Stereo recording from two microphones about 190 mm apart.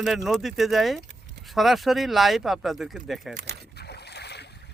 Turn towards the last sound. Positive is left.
turn(degrees=60)  # may be behind; listen again after turning